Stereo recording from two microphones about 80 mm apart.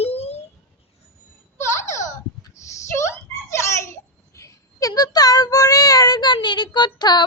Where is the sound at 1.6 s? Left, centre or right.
Left.